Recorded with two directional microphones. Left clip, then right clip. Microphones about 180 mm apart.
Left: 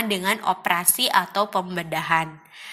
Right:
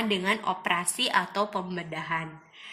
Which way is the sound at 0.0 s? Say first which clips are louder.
Left 4 dB; 20° left (ahead or behind).